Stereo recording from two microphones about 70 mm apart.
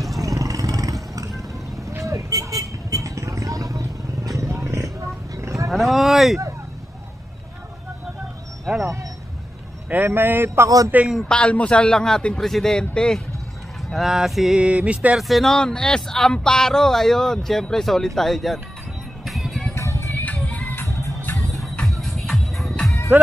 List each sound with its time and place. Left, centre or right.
0.2 s vehicle: right
4.4 s wild animals: right
5.7 s a sound: centre
9.8 s speech: right
11.1 s speech: centre
13.8 s speech: centre
14.6 s a sound: centre
15.1 s speech: centre
19.2 s music: centre
19.7 s music: left
20.4 s music: left
21.5 s music: centre